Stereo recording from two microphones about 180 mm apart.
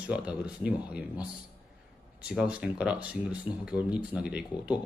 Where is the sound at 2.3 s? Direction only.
5° right (ahead or behind).